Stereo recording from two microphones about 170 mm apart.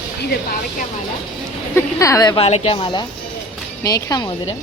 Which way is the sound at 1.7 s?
20° left (ahead or behind).